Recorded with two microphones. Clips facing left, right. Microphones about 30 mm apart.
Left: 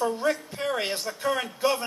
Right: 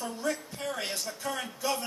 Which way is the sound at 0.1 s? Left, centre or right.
Left.